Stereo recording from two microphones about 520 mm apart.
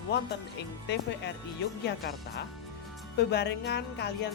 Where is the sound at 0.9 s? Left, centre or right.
Centre.